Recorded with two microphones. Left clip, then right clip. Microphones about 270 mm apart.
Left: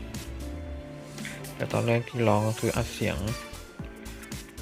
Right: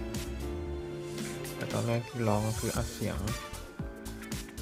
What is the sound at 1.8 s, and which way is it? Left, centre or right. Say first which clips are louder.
Speech: left 8 dB; centre.